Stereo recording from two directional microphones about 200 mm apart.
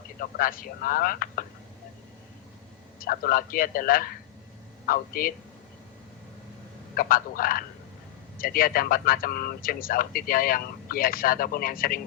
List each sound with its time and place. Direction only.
0.2 s speech: 45° left (ahead or behind)
3.0 s speech: 45° left (ahead or behind)
6.9 s speech: 45° left (ahead or behind)